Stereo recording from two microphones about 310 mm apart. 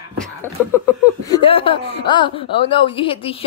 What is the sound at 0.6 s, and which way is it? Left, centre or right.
Speech, centre.